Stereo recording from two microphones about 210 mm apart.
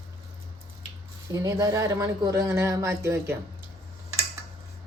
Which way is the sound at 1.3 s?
15° right (ahead or behind).